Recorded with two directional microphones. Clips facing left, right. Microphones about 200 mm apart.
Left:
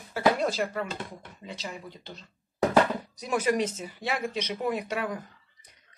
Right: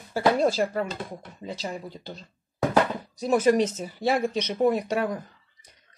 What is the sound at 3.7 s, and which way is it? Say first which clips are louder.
Speech: right 7 dB; 40° right (ahead or behind).